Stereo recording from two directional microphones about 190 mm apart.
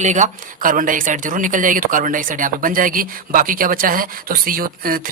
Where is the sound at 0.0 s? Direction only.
40° right (ahead or behind).